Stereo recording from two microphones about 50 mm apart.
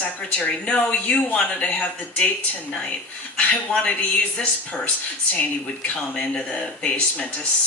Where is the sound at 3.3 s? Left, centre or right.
Left.